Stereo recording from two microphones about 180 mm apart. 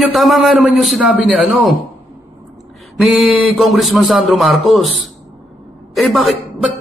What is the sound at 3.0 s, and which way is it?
A man's voice, centre (ahead or behind).